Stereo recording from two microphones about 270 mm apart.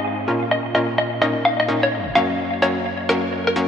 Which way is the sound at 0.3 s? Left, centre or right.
Centre.